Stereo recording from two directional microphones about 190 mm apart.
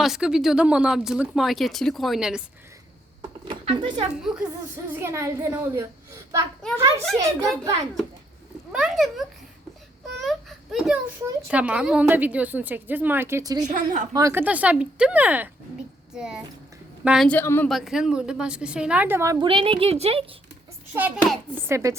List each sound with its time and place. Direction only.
0.0 s speech: 5° right (ahead or behind)
3.2 s a sound: 25° right (ahead or behind)
4.1 s a woman's voice: 5° right (ahead or behind)
6.6 s speech: 5° left (ahead or behind)
7.2 s a woman's voice: 15° right (ahead or behind)
8.7 s a child's voice: centre (ahead or behind); by 13.7 s 20° right (ahead or behind)
13.7 s a woman's voice: 40° right (ahead or behind)
14.1 s a woman's voice: 15° right (ahead or behind)
17.2 s a woman's voice: 10° left (ahead or behind)
17.7 s speech: centre (ahead or behind)
19.5 s a woman's voice: 30° right (ahead or behind)
20.9 s a woman's voice: 10° right (ahead or behind)